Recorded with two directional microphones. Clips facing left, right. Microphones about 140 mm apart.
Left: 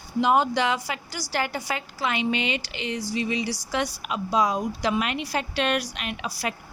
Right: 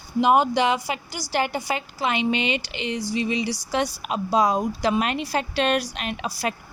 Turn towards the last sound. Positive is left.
turn(degrees=-35)  # may be behind; listen again after turning